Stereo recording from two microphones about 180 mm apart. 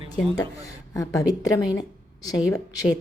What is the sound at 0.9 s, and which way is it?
A woman's voice, 20° left (ahead or behind).